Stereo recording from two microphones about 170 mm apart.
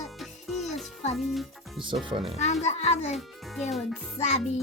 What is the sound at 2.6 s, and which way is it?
Speech, 40° left (ahead or behind).